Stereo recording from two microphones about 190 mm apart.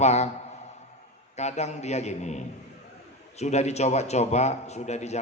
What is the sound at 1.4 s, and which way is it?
A man's voice, 35° left (ahead or behind).